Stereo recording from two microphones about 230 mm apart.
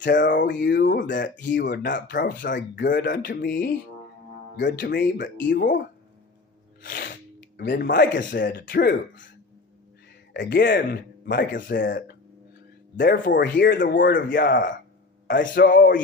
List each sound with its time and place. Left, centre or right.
0.2 s speech: left
2.9 s speech: left
6.8 s speech: left
10.3 s speech: left
13.0 s speech: left